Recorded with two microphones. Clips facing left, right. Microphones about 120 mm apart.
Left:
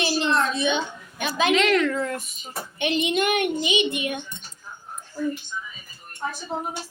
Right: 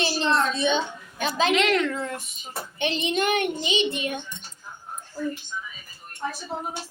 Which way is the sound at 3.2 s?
30° right (ahead or behind).